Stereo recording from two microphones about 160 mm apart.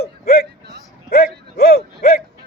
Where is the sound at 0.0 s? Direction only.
70° left (ahead or behind).